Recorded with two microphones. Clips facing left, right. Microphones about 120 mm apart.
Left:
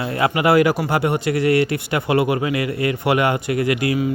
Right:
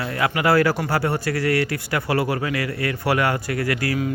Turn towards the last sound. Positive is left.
turn(degrees=20)  # may be behind; listen again after turning